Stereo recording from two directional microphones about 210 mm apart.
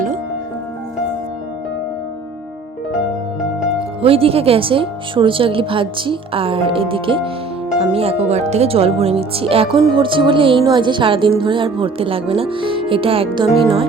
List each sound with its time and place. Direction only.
4.0 s a woman's voice: 25° right (ahead or behind)
13.5 s music: centre (ahead or behind)